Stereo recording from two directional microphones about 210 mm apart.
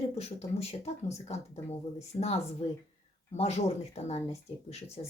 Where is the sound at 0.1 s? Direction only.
30° left (ahead or behind).